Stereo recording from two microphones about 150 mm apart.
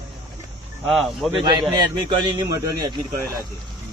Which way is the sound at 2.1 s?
30° right (ahead or behind).